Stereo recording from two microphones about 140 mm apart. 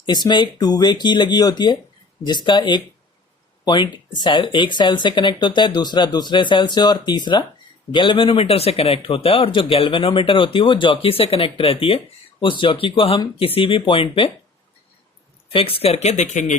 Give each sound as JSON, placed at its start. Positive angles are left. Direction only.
{"t": 0.0, "sound": "speech", "side_deg": 30}
{"t": 15.5, "sound": "speech", "side_deg": 40}